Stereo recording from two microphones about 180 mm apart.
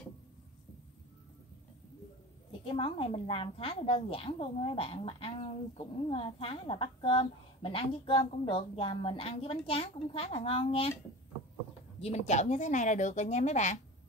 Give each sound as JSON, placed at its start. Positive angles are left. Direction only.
{"t": 2.6, "sound": "a woman's voice", "side_deg": 30}
{"t": 12.0, "sound": "a woman's voice", "side_deg": 40}